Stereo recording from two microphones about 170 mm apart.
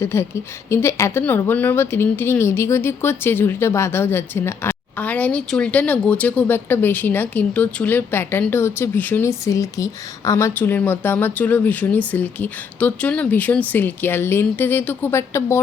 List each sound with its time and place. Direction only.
0.0 s speech: 15° left (ahead or behind)